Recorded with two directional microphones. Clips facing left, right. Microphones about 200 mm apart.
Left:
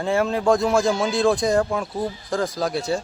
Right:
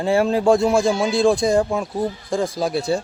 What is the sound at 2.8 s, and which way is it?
Speech, 30° right (ahead or behind).